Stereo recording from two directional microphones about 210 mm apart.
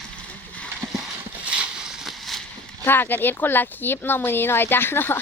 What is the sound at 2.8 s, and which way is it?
Speech, 10° left (ahead or behind).